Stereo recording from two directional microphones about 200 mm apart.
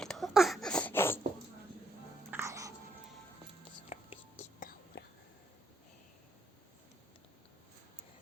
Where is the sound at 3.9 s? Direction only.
30° left (ahead or behind).